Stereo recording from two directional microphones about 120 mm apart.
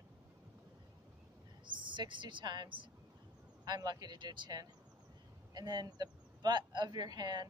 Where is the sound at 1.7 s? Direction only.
40° right (ahead or behind).